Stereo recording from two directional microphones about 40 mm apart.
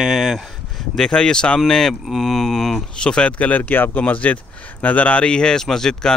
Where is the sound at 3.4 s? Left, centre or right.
Left.